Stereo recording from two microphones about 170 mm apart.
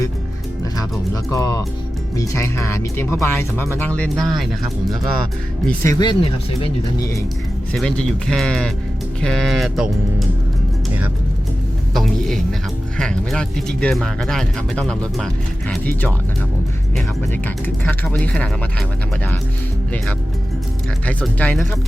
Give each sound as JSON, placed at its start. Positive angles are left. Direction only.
{"t": 0.8, "sound": "speech", "side_deg": 20}
{"t": 5.8, "sound": "speech", "side_deg": 20}
{"t": 7.7, "sound": "speech", "side_deg": 5}
{"t": 11.9, "sound": "a sound", "side_deg": 0}
{"t": 13.0, "sound": "speech", "side_deg": 5}
{"t": 17.8, "sound": "speech", "side_deg": 10}
{"t": 21.1, "sound": "speech", "side_deg": 10}